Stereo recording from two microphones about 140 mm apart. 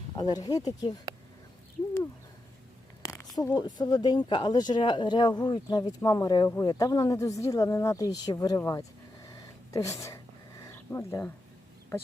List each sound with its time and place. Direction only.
0.2 s speech: 25° left (ahead or behind)
3.0 s speech: 20° left (ahead or behind)
9.2 s a sound: 25° left (ahead or behind)